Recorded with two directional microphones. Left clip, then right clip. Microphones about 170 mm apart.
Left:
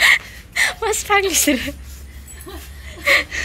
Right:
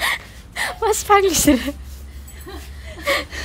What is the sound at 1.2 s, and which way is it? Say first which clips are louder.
Speech: right 2 dB; 30° right (ahead or behind).